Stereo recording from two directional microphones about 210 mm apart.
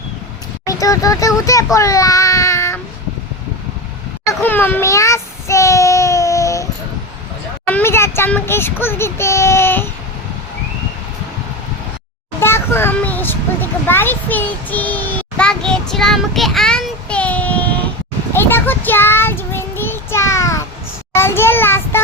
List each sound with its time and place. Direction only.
0.6 s speech: 15° left (ahead or behind)
4.3 s child singing: 10° left (ahead or behind)
7.7 s speech: 10° left (ahead or behind)
12.4 s a child's voice: 10° left (ahead or behind)
18.3 s child singing: 10° left (ahead or behind)